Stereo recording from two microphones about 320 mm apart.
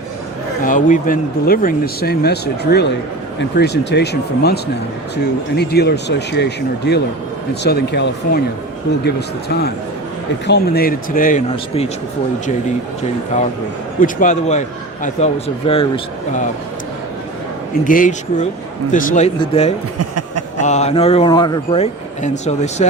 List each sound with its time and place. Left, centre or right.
0.6 s a man's voice: left
14.0 s a man's voice: left
17.8 s a man's voice: left
20.0 s a sound: right
20.6 s a man's voice: left